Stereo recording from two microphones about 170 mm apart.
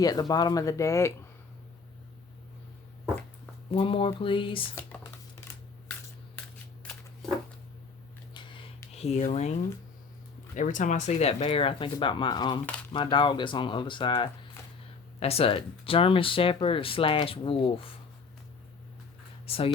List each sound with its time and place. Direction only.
0.0 s speech: 20° left (ahead or behind)
3.7 s speech: 30° left (ahead or behind)
4.7 s speech: 10° left (ahead or behind)
7.2 s a sound: centre (ahead or behind)
8.3 s a sound: 25° left (ahead or behind)
9.0 s speech: 40° left (ahead or behind)
10.5 s speech: 50° left (ahead or behind); by 17.9 s 30° left (ahead or behind)
19.5 s speech: 35° left (ahead or behind)